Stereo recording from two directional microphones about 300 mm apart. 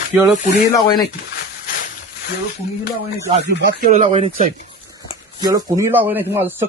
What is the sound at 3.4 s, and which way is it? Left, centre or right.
Speech, right.